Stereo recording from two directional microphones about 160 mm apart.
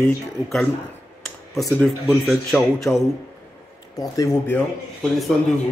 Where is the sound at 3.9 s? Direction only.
20° left (ahead or behind).